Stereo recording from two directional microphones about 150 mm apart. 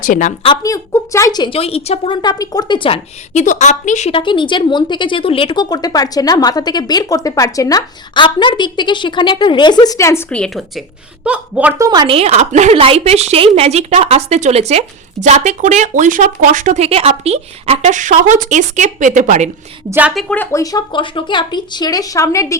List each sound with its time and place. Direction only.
0.0 s a woman's voice: 60° left (ahead or behind)
0.4 s a woman's voice: 25° left (ahead or behind)
1.5 s a woman's voice: 40° left (ahead or behind)
2.2 s speech: 25° left (ahead or behind)
3.3 s a woman's voice: 55° left (ahead or behind)
4.1 s speech: 35° left (ahead or behind)
10.2 s a woman's voice: 5° left (ahead or behind)
11.8 s speech: 30° right (ahead or behind); by 19.5 s 55° right (ahead or behind)
19.9 s a woman's voice: 10° right (ahead or behind)
20.3 s speech: 15° left (ahead or behind)